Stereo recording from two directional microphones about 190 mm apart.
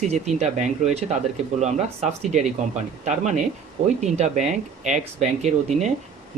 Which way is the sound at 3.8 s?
35° right (ahead or behind).